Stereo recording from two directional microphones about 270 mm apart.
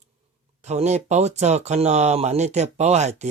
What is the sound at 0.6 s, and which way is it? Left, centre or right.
Speech, right.